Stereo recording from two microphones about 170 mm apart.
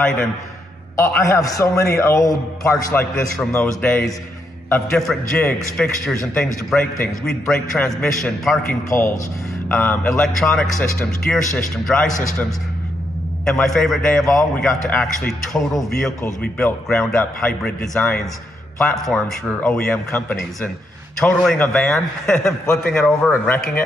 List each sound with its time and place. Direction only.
0.9 s a man's voice: 15° left (ahead or behind)
3.3 s a man's voice: 5° left (ahead or behind)
9.7 s a man's voice: 5° left (ahead or behind)